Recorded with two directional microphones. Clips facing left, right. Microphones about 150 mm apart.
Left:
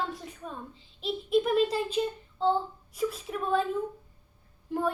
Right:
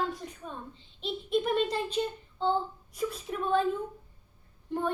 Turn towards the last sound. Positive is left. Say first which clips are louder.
# left 2 dB
turn(degrees=0)  # may be behind; listen again after turning